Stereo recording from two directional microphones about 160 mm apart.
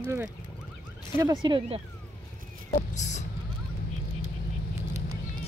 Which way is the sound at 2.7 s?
45° left (ahead or behind).